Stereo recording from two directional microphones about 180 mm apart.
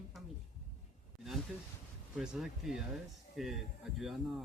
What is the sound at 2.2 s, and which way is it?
A woman's voice, 5° right (ahead or behind).